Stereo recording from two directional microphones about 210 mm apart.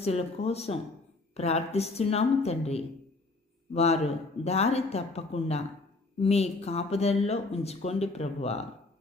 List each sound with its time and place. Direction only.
0.0 s speech: 30° left (ahead or behind)